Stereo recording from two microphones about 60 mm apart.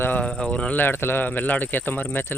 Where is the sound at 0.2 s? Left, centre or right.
Centre.